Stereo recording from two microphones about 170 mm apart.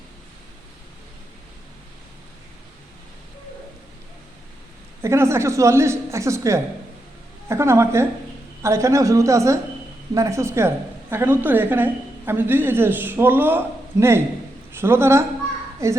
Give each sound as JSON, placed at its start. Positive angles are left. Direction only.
{"t": 5.0, "sound": "a woman's voice", "side_deg": -15}